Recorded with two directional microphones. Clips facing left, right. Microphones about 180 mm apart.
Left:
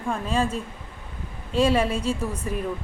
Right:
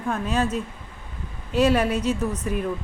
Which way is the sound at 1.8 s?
30° left (ahead or behind).